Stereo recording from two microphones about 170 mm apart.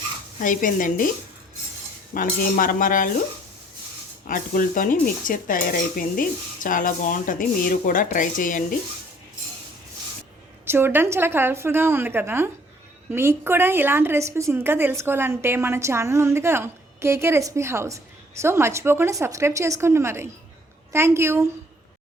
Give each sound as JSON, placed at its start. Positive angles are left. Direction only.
{"t": 0.4, "sound": "speech", "side_deg": 50}
{"t": 2.1, "sound": "speech", "side_deg": 55}
{"t": 4.3, "sound": "speech", "side_deg": 55}
{"t": 10.7, "sound": "a woman's voice", "side_deg": -15}